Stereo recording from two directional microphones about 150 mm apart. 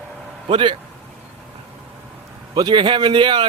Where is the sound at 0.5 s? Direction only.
35° right (ahead or behind).